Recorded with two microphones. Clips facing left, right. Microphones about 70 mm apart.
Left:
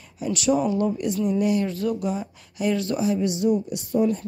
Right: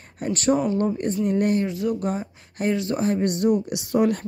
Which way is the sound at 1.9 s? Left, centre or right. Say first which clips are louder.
Right 1 dB; right.